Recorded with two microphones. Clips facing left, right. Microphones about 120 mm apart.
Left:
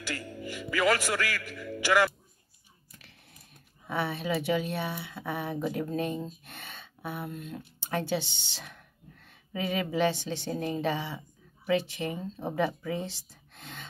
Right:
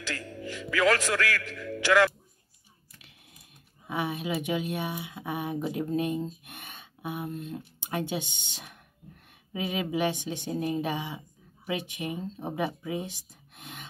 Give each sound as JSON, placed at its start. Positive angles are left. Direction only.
{"t": 0.0, "sound": "a man's voice", "side_deg": 10}
{"t": 3.8, "sound": "speech", "side_deg": -15}